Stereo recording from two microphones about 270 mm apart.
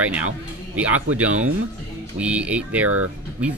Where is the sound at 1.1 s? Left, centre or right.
Right.